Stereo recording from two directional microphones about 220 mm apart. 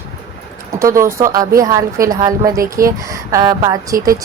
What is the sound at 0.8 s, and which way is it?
A woman's voice, 15° right (ahead or behind).